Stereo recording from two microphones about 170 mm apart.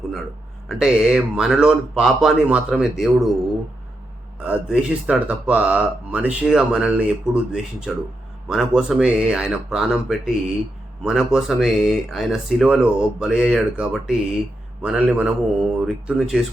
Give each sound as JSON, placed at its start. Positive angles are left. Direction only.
{"t": 0.7, "sound": "speech", "side_deg": -5}
{"t": 4.4, "sound": "speech", "side_deg": -5}